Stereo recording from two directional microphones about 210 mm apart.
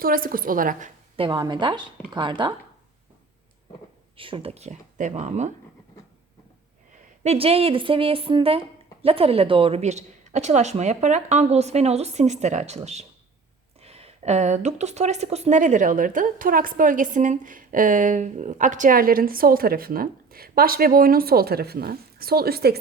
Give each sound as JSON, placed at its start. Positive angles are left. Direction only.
{"t": 0.0, "sound": "a woman's voice", "side_deg": -45}
{"t": 1.1, "sound": "a woman's voice", "side_deg": -25}
{"t": 4.2, "sound": "a woman's voice", "side_deg": -25}
{"t": 7.3, "sound": "a woman's voice", "side_deg": -25}